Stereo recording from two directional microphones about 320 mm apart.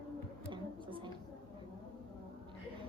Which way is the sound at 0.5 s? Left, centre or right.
Centre.